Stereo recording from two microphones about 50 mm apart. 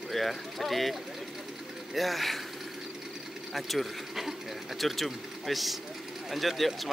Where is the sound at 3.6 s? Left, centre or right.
Centre.